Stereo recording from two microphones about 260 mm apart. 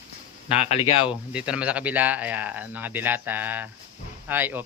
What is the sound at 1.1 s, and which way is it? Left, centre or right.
Speech, centre.